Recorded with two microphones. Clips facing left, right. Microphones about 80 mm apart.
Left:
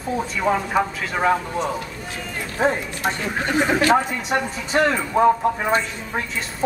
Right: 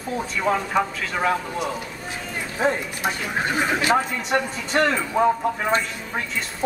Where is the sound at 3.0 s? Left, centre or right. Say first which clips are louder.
Left 1 dB; centre.